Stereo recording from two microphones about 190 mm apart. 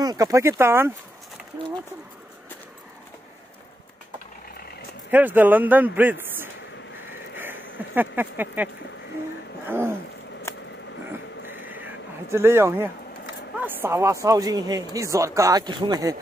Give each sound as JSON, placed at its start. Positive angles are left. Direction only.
{"t": 0.0, "sound": "speech", "side_deg": -20}
{"t": 5.1, "sound": "speech", "side_deg": -10}
{"t": 7.3, "sound": "a sound", "side_deg": -10}
{"t": 9.7, "sound": "speech", "side_deg": -10}
{"t": 11.7, "sound": "a sound", "side_deg": -10}
{"t": 13.6, "sound": "speech", "side_deg": -10}